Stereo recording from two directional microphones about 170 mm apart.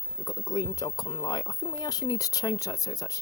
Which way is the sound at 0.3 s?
20° left (ahead or behind).